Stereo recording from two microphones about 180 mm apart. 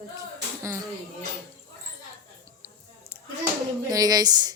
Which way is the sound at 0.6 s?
15° right (ahead or behind).